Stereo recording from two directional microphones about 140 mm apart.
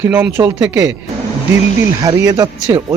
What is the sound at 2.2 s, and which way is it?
Speech, 25° right (ahead or behind).